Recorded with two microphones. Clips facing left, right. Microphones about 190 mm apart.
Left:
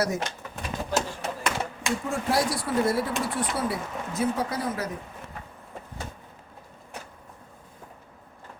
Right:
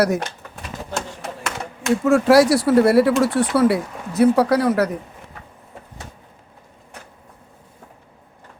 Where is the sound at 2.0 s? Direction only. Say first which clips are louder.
Right 14 dB; 85° right.